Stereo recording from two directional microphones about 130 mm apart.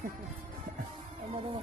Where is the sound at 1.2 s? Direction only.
40° right (ahead or behind).